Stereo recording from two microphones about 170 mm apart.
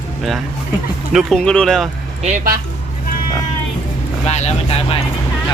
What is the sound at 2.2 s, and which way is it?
Speech, 45° right (ahead or behind).